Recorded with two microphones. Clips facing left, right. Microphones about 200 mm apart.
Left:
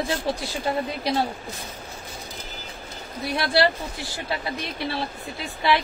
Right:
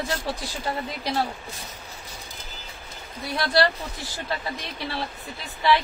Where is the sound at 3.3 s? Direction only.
10° left (ahead or behind).